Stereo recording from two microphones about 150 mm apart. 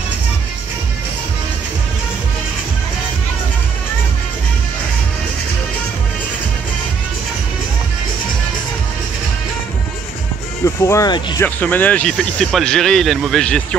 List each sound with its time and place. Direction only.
10.6 s speech: 20° left (ahead or behind)
11.1 s speech: 30° left (ahead or behind)
11.4 s speech: 10° left (ahead or behind)